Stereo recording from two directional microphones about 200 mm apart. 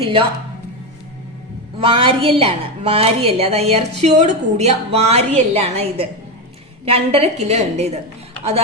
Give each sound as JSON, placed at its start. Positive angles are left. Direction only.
{"t": 0.0, "sound": "a woman's voice", "side_deg": -25}
{"t": 1.8, "sound": "a woman's voice", "side_deg": -25}